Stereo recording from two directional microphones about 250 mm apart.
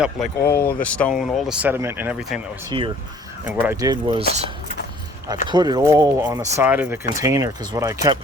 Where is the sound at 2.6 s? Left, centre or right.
Right.